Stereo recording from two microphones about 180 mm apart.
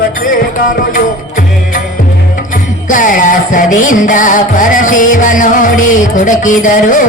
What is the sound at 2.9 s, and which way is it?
Music, 45° left (ahead or behind).